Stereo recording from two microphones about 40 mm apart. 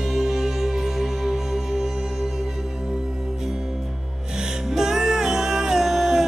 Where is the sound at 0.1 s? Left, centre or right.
Centre.